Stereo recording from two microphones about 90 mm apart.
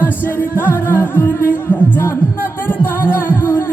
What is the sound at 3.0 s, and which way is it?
Music, 25° left (ahead or behind).